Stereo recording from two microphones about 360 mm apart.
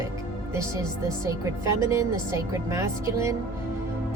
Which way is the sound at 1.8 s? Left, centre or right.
Centre.